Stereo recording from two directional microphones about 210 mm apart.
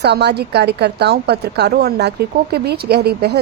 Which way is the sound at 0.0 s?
50° right (ahead or behind).